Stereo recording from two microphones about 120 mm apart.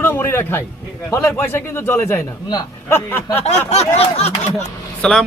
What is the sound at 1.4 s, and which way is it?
Speech, 20° left (ahead or behind).